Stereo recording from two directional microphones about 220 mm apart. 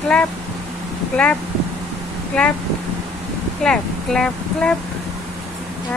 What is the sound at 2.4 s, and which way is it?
Speech, 5° left (ahead or behind).